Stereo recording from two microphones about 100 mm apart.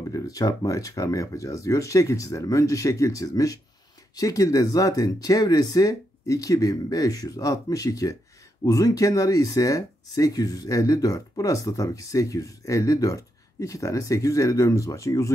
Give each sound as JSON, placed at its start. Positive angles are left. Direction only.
{"t": 0.1, "sound": "speech", "side_deg": 35}